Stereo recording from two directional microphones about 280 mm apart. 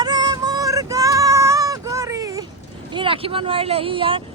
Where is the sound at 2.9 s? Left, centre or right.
Centre.